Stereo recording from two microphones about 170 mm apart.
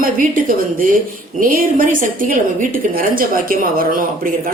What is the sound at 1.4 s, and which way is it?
A woman's voice, 55° right (ahead or behind).